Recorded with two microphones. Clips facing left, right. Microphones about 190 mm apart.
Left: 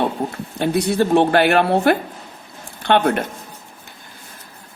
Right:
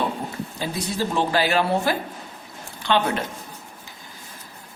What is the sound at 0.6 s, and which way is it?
A woman's voice, 65° left (ahead or behind).